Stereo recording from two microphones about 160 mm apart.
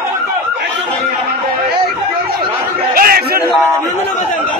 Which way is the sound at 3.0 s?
70° right (ahead or behind).